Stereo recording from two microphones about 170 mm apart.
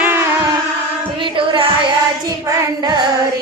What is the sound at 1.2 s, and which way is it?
Music, 30° right (ahead or behind).